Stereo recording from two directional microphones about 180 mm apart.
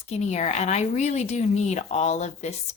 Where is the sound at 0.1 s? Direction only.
40° left (ahead or behind).